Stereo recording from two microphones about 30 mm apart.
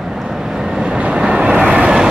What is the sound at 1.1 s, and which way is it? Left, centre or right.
Vehicle, right.